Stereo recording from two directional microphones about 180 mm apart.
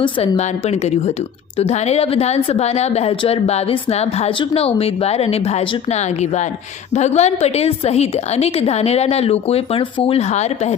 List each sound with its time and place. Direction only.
0.0 s a woman's voice: 35° left (ahead or behind)